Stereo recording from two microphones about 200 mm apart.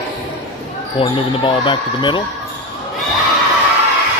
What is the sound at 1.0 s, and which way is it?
Speech, 25° left (ahead or behind).